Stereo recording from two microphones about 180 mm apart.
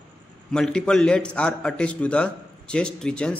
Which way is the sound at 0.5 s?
5° left (ahead or behind).